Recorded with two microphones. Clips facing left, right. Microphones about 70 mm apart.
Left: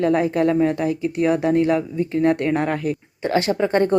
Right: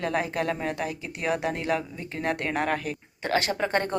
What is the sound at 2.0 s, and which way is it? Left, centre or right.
Speech, right.